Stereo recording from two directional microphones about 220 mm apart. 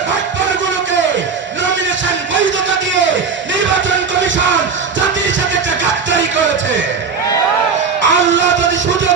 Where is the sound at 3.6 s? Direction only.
55° right (ahead or behind).